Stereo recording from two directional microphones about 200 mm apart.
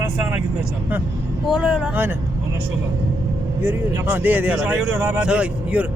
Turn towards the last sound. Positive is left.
turn(degrees=-5)  # may be behind; listen again after turning